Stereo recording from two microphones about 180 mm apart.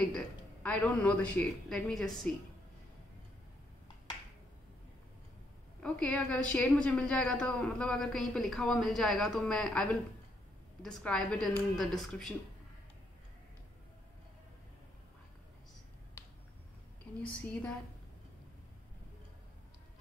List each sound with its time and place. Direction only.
0.0 s a woman's voice: 5° left (ahead or behind)
5.8 s a woman's voice: 5° left (ahead or behind)
17.0 s a woman's voice: 5° left (ahead or behind)